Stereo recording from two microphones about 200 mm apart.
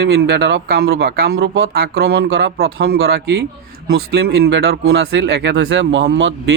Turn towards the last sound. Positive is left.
turn(degrees=-60)  # may be behind; listen again after turning